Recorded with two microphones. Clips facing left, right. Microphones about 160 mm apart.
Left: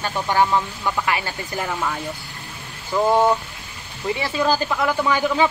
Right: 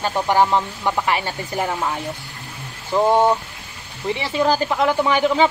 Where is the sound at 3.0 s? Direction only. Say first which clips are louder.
Right 1 dB; 20° right (ahead or behind).